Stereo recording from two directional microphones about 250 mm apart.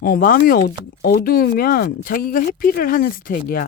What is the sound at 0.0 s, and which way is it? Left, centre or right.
Speech, left.